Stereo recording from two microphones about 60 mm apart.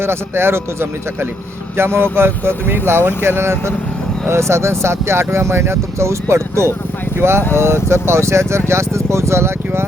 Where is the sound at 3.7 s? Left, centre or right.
Centre.